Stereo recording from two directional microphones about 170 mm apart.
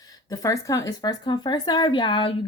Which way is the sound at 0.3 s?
20° left (ahead or behind).